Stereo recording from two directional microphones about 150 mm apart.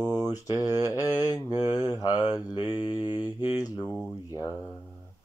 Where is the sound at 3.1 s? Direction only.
15° right (ahead or behind).